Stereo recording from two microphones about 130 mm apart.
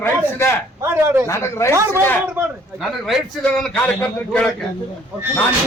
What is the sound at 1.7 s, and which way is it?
Speech, 20° right (ahead or behind).